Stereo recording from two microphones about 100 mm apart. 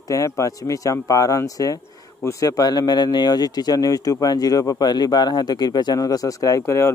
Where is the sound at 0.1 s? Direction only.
30° left (ahead or behind).